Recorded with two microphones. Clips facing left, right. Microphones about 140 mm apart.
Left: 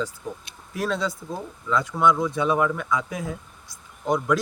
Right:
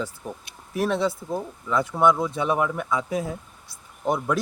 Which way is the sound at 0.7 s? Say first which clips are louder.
Right 3 dB; 25° right (ahead or behind).